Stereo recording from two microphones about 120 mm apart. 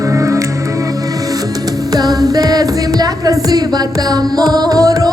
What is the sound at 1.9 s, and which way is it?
Music, 30° right (ahead or behind).